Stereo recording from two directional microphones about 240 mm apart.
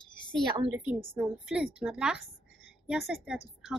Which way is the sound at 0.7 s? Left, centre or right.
Centre.